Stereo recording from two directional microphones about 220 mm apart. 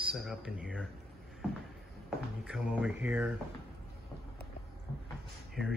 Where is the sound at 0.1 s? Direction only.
Centre (ahead or behind).